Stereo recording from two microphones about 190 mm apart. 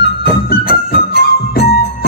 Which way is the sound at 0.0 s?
60° left (ahead or behind).